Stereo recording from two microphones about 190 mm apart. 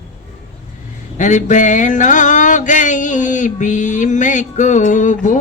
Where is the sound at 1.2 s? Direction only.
40° left (ahead or behind).